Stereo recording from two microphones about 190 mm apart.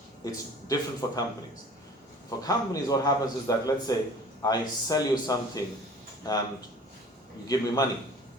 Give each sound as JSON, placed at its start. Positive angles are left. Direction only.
{"t": 0.3, "sound": "a man's voice", "side_deg": 20}
{"t": 2.4, "sound": "a man's voice", "side_deg": 20}
{"t": 7.4, "sound": "a man's voice", "side_deg": 20}